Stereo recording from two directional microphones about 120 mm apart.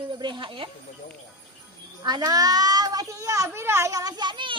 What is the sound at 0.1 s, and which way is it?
Speech, 40° right (ahead or behind).